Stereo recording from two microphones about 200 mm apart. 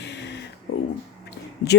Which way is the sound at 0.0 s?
60° left (ahead or behind).